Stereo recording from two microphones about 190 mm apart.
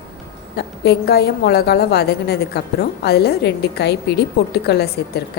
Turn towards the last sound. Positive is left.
turn(degrees=55)  # may be behind; listen again after turning